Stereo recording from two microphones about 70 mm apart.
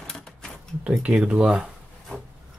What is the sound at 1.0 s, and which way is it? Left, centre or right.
Speech, centre.